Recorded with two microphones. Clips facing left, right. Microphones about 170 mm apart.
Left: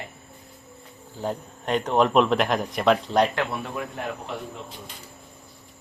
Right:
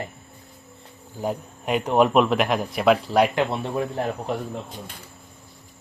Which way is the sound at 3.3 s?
25° right (ahead or behind).